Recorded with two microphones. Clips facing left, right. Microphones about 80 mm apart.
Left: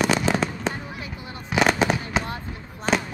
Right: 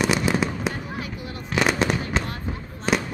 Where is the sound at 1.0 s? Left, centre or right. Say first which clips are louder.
Right 2 dB; left.